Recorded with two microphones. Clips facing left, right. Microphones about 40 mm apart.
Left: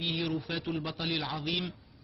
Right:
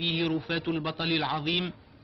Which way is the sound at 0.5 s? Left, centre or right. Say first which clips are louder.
Right 5 dB; right.